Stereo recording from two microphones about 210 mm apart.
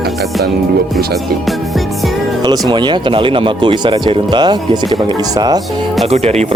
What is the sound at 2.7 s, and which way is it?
Speech, 20° right (ahead or behind).